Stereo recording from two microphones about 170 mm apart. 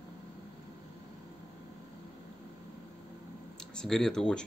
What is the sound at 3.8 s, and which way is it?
Speech, 5° left (ahead or behind).